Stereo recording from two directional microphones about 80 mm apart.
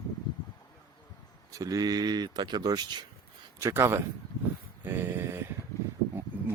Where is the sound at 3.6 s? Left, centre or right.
Right.